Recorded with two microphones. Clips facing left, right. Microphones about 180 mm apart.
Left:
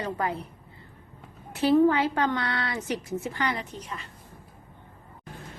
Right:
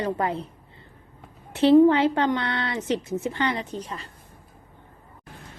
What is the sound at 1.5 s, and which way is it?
A woman's voice, 25° right (ahead or behind).